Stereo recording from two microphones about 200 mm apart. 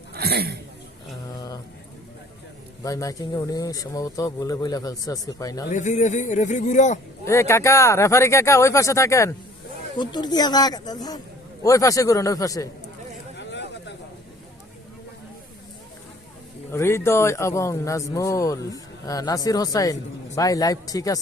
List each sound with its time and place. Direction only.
0.1 s speech: 50° right (ahead or behind)
1.3 s a sound: 15° left (ahead or behind)
2.8 s speech: 15° left (ahead or behind)
5.7 s speech: 35° left (ahead or behind)
7.3 s speech: 15° left (ahead or behind)
13.4 s a sound: 60° left (ahead or behind)
16.7 s speech: 15° left (ahead or behind)